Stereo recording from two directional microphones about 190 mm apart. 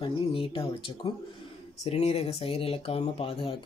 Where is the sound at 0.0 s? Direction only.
25° left (ahead or behind).